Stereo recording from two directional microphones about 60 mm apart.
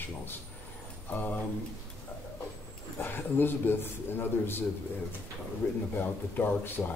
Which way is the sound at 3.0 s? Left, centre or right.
Left.